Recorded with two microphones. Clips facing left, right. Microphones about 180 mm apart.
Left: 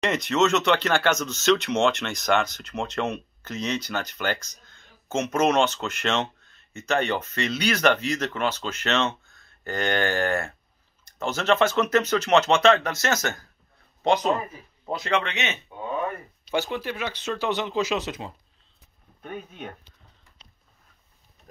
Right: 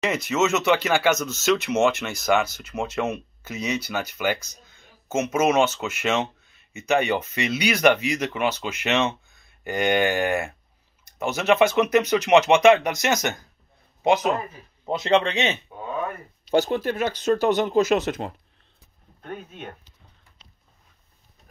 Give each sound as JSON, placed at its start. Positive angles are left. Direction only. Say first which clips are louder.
{"t": 0.0, "sound": "speech", "louder": "even", "side_deg": -5}
{"t": 14.9, "sound": "speech", "louder": "right 5 dB", "side_deg": -25}